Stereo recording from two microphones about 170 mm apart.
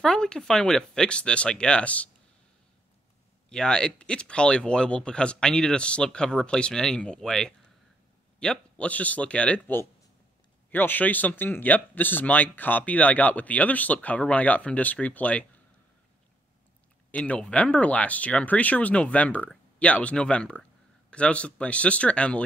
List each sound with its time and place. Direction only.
0.0 s speech: 5° left (ahead or behind)
3.4 s speech: 5° left (ahead or behind)
17.1 s speech: 5° left (ahead or behind)